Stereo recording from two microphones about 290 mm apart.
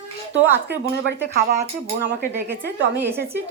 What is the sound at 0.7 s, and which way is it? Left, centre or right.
Speech, right.